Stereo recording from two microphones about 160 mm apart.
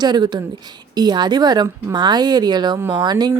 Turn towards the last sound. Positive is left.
turn(degrees=-25)  # may be behind; listen again after turning